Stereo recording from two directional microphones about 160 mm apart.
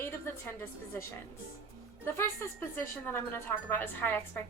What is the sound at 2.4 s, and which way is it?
A woman's voice, 15° left (ahead or behind).